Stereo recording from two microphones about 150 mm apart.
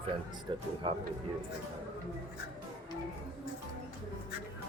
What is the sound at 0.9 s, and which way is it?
Speech, 35° right (ahead or behind).